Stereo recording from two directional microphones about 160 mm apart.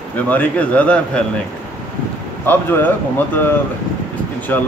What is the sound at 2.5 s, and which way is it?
Speech, 10° left (ahead or behind).